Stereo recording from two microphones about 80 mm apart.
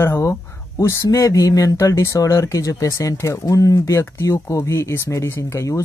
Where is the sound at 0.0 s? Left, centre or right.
Left.